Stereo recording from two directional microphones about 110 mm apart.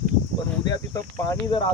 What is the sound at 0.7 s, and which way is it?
Speech, 35° left (ahead or behind).